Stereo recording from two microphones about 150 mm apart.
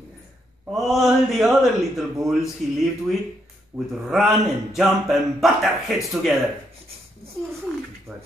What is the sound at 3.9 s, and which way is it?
A man's voice, centre (ahead or behind).